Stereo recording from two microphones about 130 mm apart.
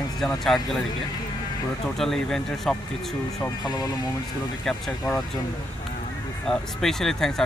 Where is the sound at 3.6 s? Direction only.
30° left (ahead or behind).